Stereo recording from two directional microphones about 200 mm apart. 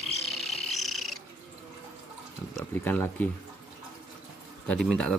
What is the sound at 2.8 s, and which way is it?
Speech, 10° left (ahead or behind).